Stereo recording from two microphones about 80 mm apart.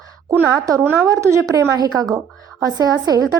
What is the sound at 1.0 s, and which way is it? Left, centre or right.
Speech, right.